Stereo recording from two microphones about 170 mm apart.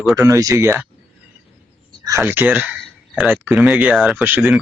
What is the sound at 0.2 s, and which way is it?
Speech, 20° right (ahead or behind).